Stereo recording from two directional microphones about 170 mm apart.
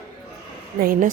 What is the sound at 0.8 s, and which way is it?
Speech, 55° right (ahead or behind).